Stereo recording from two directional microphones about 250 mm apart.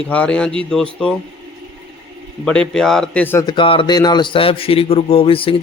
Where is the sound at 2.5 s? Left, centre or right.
Centre.